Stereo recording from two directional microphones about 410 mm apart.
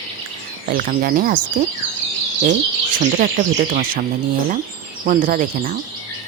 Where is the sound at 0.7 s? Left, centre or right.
Right.